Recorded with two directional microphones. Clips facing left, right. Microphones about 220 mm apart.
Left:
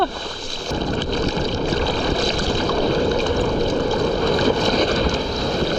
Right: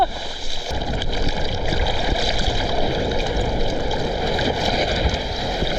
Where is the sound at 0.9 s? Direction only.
5° right (ahead or behind).